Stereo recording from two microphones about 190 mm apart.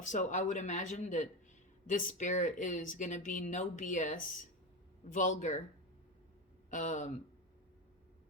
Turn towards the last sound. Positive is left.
turn(degrees=40)  # may be behind; listen again after turning